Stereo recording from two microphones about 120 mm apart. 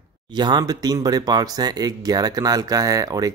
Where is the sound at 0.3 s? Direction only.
40° right (ahead or behind).